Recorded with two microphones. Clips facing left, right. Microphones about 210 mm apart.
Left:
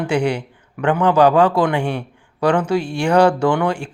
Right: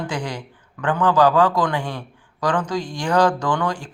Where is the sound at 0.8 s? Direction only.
25° left (ahead or behind).